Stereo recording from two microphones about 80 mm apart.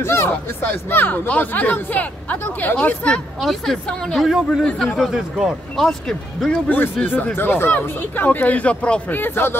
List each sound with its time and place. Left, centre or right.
0.0 s speech: left; by 3.2 s centre
3.3 s speech: centre
7.3 s speech: left
9.1 s speech: left